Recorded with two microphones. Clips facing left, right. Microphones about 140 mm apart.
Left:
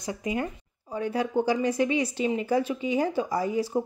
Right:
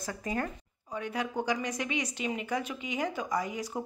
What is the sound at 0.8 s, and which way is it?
A woman's voice, 30° left (ahead or behind).